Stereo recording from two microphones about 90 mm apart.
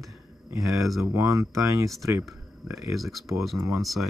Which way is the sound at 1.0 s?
30° right (ahead or behind).